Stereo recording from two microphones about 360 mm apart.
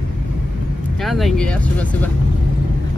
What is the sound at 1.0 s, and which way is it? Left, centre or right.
Speech, centre.